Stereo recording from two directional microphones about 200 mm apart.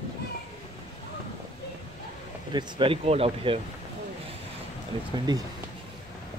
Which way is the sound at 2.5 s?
25° right (ahead or behind).